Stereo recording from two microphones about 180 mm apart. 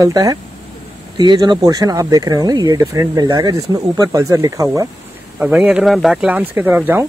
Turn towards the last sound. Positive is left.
turn(degrees=-10)  # may be behind; listen again after turning